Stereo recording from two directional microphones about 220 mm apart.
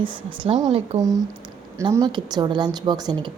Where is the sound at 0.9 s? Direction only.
15° right (ahead or behind).